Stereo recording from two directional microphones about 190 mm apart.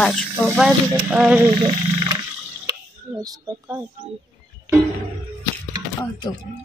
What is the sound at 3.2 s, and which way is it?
Speech, 20° right (ahead or behind).